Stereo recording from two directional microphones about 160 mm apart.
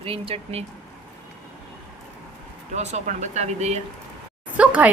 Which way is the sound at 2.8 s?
45° right (ahead or behind).